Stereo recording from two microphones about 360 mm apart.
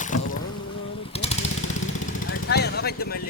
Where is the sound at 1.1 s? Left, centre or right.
Centre.